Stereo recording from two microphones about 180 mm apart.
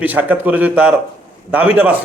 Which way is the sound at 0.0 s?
10° right (ahead or behind).